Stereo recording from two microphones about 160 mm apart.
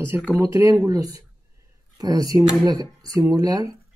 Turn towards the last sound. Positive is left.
turn(degrees=-20)  # may be behind; listen again after turning